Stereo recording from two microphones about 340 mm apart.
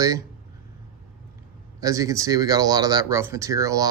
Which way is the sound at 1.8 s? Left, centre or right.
Centre.